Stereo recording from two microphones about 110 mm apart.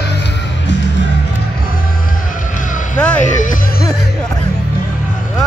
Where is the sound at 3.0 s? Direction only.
10° left (ahead or behind).